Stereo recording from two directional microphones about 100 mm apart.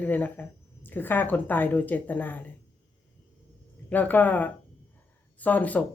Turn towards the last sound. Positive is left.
turn(degrees=15)  # may be behind; listen again after turning